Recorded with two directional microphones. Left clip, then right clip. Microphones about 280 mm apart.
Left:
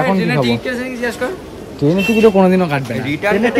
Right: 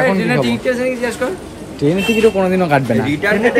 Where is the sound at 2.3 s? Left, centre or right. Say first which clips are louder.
Even; left.